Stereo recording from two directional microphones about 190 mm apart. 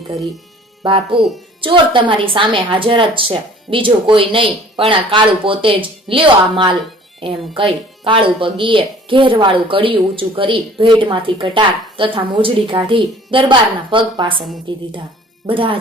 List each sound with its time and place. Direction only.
0.8 s speech: 25° right (ahead or behind)